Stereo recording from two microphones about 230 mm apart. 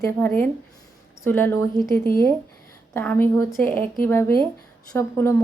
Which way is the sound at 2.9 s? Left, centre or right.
Centre.